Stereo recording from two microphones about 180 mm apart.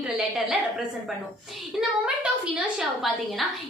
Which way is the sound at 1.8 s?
5° right (ahead or behind).